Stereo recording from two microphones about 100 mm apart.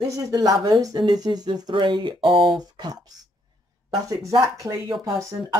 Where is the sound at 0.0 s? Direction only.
35° right (ahead or behind); by 2.2 s 55° right (ahead or behind).